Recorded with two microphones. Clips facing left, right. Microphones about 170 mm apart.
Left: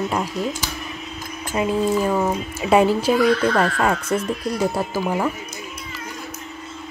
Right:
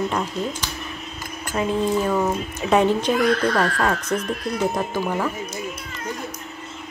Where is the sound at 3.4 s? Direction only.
30° left (ahead or behind).